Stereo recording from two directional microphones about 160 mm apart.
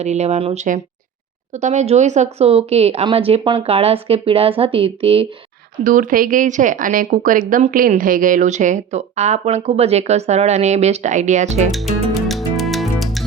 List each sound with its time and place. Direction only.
0.0 s a woman's voice: 45° right (ahead or behind)
5.8 s speech: 60° right (ahead or behind)
12.1 s music: centre (ahead or behind)